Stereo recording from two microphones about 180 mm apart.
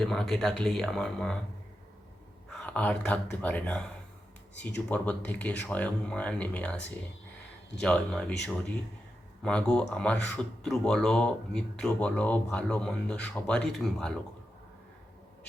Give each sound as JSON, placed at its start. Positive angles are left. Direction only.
{"t": 0.0, "sound": "speech", "side_deg": 0}
{"t": 2.5, "sound": "speech", "side_deg": 5}
{"t": 4.9, "sound": "speech", "side_deg": 10}